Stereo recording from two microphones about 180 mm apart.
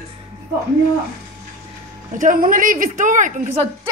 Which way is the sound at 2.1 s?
50° right (ahead or behind).